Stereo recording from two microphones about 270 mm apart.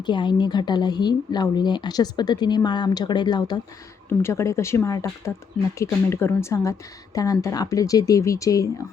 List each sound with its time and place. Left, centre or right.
0.0 s speech: centre